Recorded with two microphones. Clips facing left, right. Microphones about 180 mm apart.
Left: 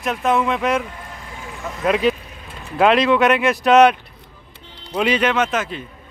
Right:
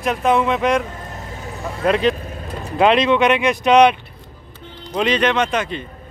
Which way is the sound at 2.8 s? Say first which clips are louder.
Even; centre (ahead or behind).